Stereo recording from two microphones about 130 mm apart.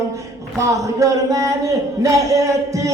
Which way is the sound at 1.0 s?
25° right (ahead or behind).